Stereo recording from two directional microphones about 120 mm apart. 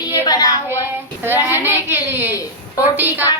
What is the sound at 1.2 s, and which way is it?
A woman's voice, 15° right (ahead or behind).